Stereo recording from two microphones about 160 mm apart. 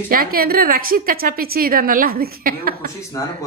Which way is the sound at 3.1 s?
20° left (ahead or behind).